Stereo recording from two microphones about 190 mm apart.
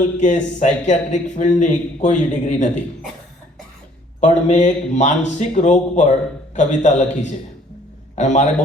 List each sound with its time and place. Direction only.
0.2 s a man's voice: 40° left (ahead or behind)
4.2 s a man's voice: 40° left (ahead or behind)